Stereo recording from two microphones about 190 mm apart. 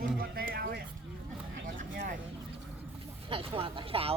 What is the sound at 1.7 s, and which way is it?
Vehicle, 45° right (ahead or behind).